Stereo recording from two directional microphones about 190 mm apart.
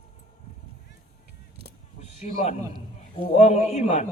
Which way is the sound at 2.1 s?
40° left (ahead or behind).